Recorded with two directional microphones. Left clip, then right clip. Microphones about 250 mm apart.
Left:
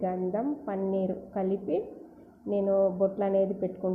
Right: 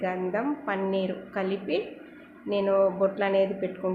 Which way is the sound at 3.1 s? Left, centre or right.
Centre.